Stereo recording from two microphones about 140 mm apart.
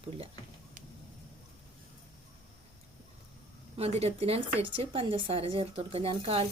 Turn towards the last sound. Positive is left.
turn(degrees=-45)  # may be behind; listen again after turning